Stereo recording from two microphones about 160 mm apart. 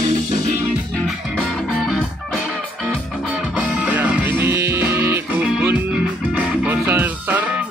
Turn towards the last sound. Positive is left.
turn(degrees=-10)  # may be behind; listen again after turning